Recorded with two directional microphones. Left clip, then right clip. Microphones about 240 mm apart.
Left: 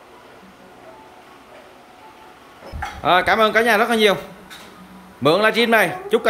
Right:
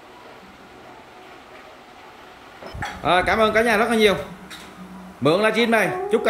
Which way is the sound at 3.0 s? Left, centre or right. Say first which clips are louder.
Left 3 dB; centre.